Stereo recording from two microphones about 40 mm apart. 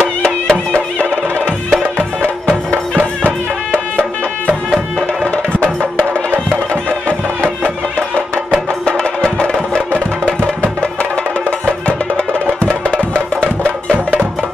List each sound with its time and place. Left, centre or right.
0.2 s music: centre
0.7 s music: left
2.7 s music: right
8.8 s music: centre
13.4 s music: left